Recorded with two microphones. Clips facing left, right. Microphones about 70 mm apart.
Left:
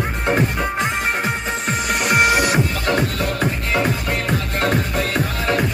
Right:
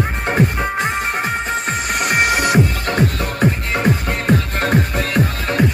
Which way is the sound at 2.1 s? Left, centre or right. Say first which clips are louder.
Even; right.